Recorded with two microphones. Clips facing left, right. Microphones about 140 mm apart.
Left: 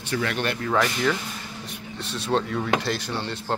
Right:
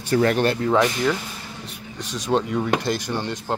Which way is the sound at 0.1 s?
40° right (ahead or behind).